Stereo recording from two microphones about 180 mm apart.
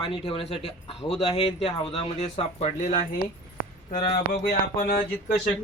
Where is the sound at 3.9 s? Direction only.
60° left (ahead or behind).